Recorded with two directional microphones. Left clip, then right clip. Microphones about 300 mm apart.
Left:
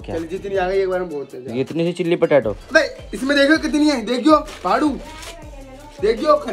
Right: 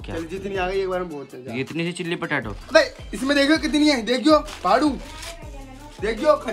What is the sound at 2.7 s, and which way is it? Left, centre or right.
A woman's voice, right.